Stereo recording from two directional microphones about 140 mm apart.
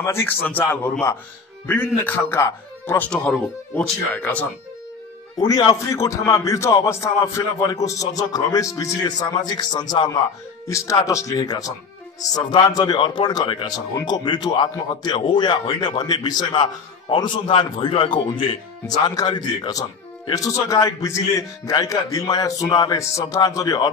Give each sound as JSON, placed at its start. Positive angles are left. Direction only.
{"t": 0.0, "sound": "speech", "side_deg": 20}
{"t": 3.1, "sound": "speech", "side_deg": 5}
{"t": 5.5, "sound": "speech", "side_deg": 25}